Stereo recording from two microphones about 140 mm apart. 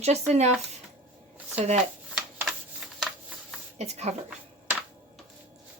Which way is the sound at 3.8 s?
50° right (ahead or behind).